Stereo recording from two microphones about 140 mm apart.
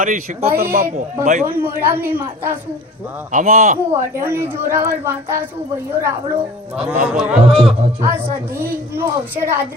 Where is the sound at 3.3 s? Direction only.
70° right (ahead or behind).